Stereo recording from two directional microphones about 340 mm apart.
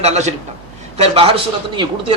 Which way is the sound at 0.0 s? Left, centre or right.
Centre.